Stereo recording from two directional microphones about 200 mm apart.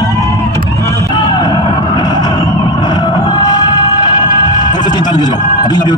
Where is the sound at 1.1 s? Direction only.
20° left (ahead or behind).